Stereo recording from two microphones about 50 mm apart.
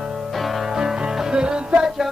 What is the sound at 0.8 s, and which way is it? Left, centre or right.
Music, centre.